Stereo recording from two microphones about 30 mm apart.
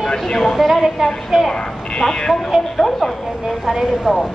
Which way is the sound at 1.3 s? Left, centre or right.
Centre.